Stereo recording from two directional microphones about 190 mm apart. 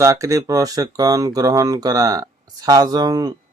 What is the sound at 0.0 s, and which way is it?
Speech, 15° right (ahead or behind).